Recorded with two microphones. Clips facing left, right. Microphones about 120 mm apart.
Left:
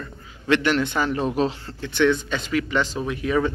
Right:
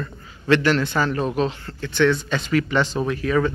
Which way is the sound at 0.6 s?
15° left (ahead or behind).